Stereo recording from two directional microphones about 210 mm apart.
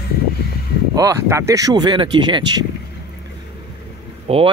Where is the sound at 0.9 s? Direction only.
15° right (ahead or behind).